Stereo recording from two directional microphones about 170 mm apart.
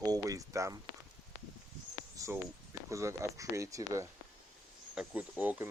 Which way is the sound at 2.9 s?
15° right (ahead or behind).